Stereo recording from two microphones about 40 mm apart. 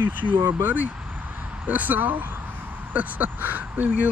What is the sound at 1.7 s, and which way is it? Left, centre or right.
Speech, right.